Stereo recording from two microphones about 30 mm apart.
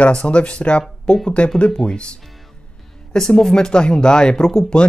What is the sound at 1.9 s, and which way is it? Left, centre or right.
Speech, left.